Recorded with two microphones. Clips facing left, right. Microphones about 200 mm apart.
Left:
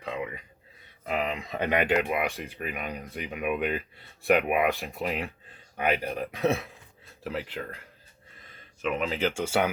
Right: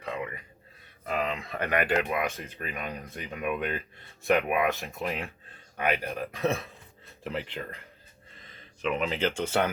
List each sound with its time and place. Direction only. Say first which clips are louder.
0.0 s a sound: left 1 dB; 15° left (ahead or behind)
1.0 s speech: left 1 dB; 15° left (ahead or behind)
8.8 s speech: even; 5° left (ahead or behind)